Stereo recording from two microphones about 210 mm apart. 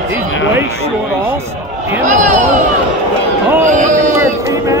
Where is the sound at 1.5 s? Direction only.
10° right (ahead or behind).